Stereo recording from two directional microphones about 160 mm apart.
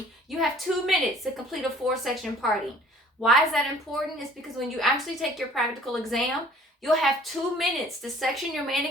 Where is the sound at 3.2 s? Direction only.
Centre (ahead or behind).